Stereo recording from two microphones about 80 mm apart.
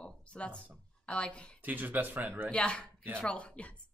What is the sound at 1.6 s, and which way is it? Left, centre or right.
Speech, right.